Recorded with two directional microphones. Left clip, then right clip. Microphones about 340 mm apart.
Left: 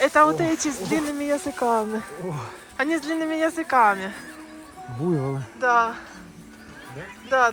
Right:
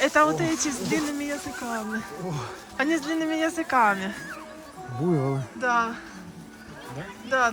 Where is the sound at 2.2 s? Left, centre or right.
Left.